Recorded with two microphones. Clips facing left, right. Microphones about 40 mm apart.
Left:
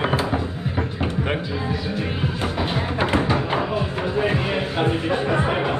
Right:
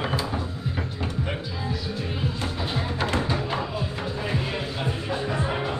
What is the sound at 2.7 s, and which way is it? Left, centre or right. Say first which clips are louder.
Music: left 4 dB; left.